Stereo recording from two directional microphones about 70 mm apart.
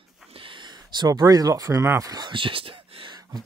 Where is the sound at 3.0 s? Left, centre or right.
Right.